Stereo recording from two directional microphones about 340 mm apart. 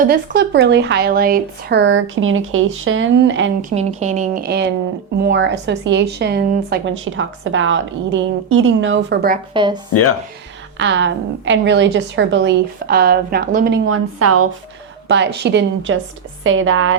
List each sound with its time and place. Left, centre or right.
0.0 s a woman's voice: right
3.8 s a woman's voice: centre
9.5 s speech: centre
9.9 s speech: left
10.8 s a woman's voice: right
15.0 s a woman's voice: right